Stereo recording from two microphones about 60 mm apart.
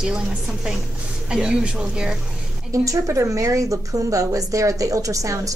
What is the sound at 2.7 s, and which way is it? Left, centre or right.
Speech, right.